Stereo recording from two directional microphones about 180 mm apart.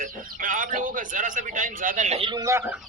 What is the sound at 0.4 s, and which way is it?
A man's voice, 45° right (ahead or behind).